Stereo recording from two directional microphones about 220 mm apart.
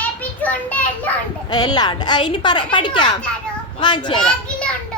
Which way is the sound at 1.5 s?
20° left (ahead or behind).